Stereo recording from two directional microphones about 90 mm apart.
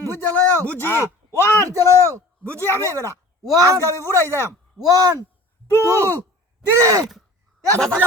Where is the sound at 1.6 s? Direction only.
40° right (ahead or behind).